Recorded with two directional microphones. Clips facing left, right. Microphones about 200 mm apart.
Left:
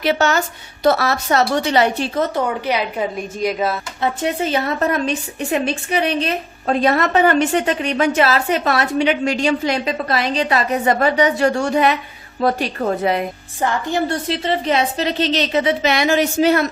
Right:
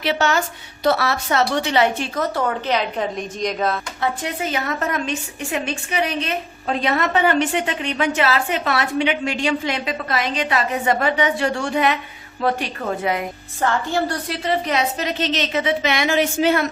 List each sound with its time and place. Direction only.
0.0 s a woman's voice: 45° left (ahead or behind)
2.3 s a woman's voice: 15° left (ahead or behind)
4.0 s a woman's voice: 25° left (ahead or behind)
6.8 s a woman's voice: 45° left (ahead or behind)
13.6 s a woman's voice: 15° left (ahead or behind); by 16.6 s 40° left (ahead or behind)